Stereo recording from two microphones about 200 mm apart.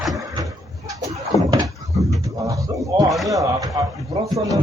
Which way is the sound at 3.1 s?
Centre (ahead or behind).